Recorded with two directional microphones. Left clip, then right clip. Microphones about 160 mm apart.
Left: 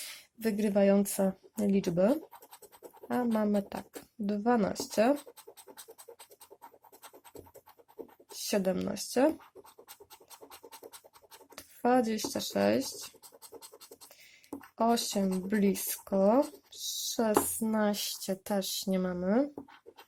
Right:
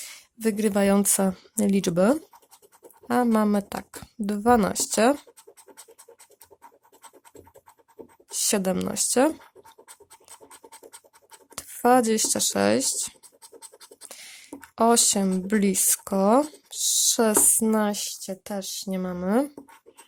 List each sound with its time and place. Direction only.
0.3 s speech: 30° right (ahead or behind); by 5.1 s 50° right (ahead or behind)
8.3 s speech: 45° right (ahead or behind)
10.8 s scratch: centre (ahead or behind)
11.5 s speech: 45° right (ahead or behind)
14.8 s speech: 50° right (ahead or behind)
17.8 s speech: 20° right (ahead or behind)
19.2 s speech: 35° right (ahead or behind)